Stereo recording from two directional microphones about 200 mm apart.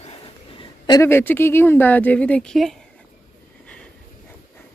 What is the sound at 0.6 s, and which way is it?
Speech, 20° left (ahead or behind).